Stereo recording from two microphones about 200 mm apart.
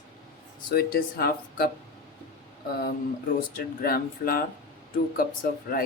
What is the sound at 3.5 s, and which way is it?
Speech, 50° left (ahead or behind).